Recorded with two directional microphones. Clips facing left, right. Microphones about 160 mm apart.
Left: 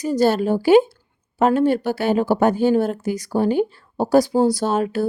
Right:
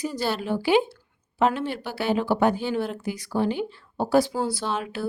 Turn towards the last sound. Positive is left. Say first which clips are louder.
# left 9 dB
turn(degrees=45)  # may be behind; listen again after turning